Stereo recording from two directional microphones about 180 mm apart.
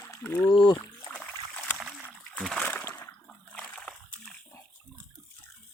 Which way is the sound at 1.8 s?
5° right (ahead or behind).